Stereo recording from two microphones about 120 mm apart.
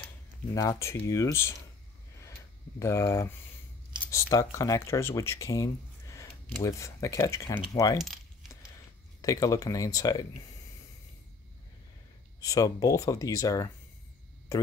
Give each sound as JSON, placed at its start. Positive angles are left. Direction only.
{"t": 0.6, "sound": "speech", "side_deg": 25}
{"t": 2.8, "sound": "speech", "side_deg": 25}
{"t": 8.0, "sound": "keys jangling", "side_deg": 0}
{"t": 9.2, "sound": "speech", "side_deg": 30}
{"t": 12.4, "sound": "speech", "side_deg": 30}